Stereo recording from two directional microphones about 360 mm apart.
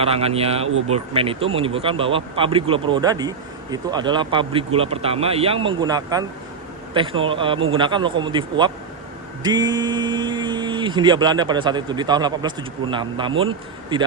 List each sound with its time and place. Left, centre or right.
0.0 s speech: centre